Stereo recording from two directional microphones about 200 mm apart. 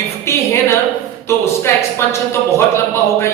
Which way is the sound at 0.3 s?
15° left (ahead or behind).